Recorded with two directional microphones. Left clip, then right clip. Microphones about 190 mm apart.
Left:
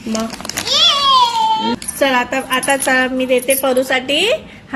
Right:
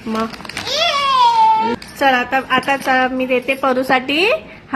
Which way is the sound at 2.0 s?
20° right (ahead or behind).